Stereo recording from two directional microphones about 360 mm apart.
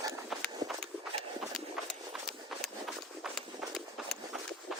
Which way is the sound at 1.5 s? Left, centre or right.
Centre.